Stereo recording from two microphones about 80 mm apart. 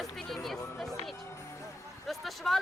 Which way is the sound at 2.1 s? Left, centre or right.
Centre.